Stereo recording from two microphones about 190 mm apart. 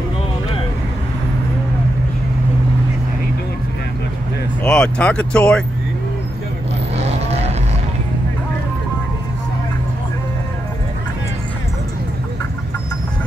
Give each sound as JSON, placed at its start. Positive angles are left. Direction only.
{"t": 4.6, "sound": "speech", "side_deg": 5}
{"t": 7.0, "sound": "vehicle", "side_deg": -35}